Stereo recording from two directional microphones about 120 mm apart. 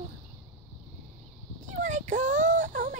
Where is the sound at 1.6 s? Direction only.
90° right.